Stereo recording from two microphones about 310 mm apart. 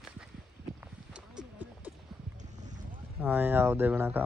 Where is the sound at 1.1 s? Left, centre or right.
Centre.